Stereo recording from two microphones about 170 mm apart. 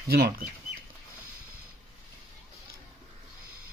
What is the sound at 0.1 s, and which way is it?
Speech, 65° right (ahead or behind).